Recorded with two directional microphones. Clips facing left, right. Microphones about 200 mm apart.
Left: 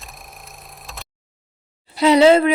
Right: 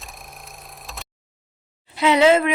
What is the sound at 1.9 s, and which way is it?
Speech, 35° left (ahead or behind).